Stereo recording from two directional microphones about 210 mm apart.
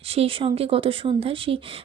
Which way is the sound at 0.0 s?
25° right (ahead or behind).